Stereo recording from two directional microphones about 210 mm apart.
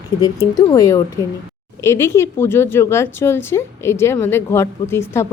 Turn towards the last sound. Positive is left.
turn(degrees=10)  # may be behind; listen again after turning